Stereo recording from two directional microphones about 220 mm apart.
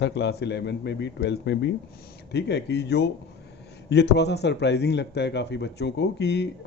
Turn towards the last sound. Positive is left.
turn(degrees=50)  # may be behind; listen again after turning